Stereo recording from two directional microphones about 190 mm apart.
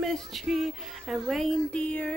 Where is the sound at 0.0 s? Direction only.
Centre (ahead or behind).